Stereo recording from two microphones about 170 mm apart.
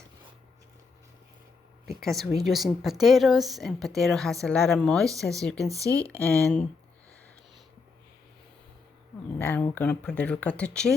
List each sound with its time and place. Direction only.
1.9 s a woman's voice: centre (ahead or behind)
5.6 s speech: 20° right (ahead or behind)
6.1 s speech: 10° left (ahead or behind)
9.4 s speech: 10° left (ahead or behind)